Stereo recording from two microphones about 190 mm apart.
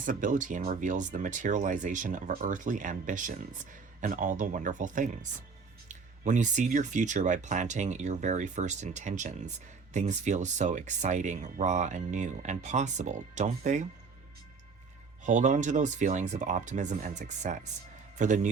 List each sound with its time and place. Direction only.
0.0 s speech: 45° right (ahead or behind)
15.2 s speech: 40° right (ahead or behind)